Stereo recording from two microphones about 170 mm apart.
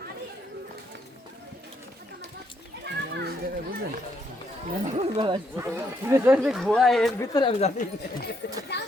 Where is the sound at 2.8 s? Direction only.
75° right (ahead or behind).